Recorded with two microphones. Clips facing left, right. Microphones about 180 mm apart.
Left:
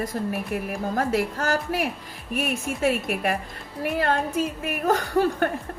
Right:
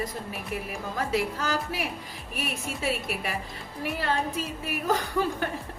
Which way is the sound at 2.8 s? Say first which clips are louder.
Left 7 dB; 55° left (ahead or behind).